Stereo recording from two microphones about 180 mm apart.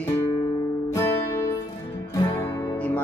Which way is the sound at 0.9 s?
15° left (ahead or behind).